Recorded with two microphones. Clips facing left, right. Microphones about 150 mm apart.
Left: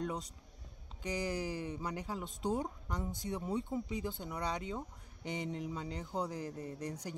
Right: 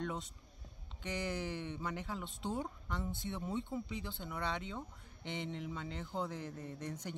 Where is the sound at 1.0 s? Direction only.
35° left (ahead or behind).